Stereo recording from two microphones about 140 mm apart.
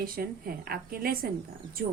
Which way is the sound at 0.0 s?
90° right.